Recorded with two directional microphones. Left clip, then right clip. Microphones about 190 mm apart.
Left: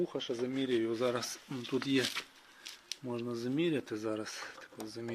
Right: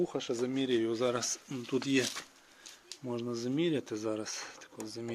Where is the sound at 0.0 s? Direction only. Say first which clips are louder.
Right 2 dB; 20° right (ahead or behind).